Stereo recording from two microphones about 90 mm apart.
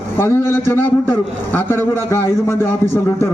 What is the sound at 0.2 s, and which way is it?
A man's voice, 25° left (ahead or behind).